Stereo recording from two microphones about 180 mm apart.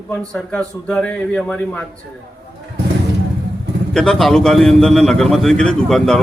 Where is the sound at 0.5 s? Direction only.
5° left (ahead or behind).